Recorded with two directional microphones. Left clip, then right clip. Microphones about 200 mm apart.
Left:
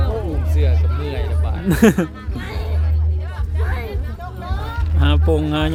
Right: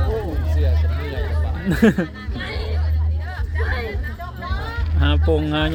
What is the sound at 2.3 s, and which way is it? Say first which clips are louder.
Music: right 3 dB; 35° left (ahead or behind).